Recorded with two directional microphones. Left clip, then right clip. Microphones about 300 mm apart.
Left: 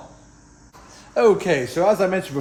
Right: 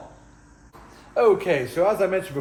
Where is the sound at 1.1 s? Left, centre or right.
Left.